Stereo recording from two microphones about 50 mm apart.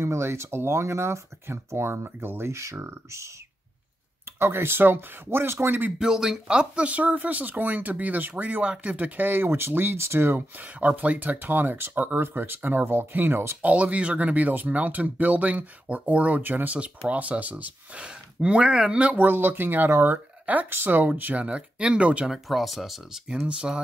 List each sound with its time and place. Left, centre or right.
0.0 s speech: right
4.4 s speech: right
5.9 s speech: centre; by 10.4 s right
10.6 s speech: right
13.6 s speech: right
18.0 s speech: right
19.1 s speech: right
19.9 s speech: right
20.7 s speech: right
21.2 s speech: right
22.3 s speech: centre